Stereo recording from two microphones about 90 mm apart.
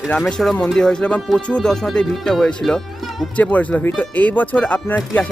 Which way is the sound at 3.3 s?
15° left (ahead or behind).